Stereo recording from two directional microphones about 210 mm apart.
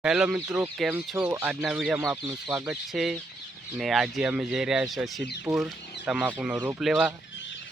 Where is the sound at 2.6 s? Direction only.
Centre (ahead or behind).